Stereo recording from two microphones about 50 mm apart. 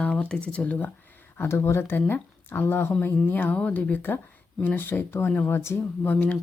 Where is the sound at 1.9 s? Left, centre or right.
Left.